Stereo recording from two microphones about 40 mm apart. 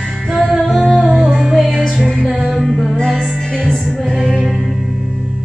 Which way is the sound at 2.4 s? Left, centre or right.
Centre.